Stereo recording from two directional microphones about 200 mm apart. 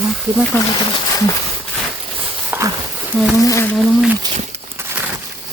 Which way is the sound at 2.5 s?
15° right (ahead or behind).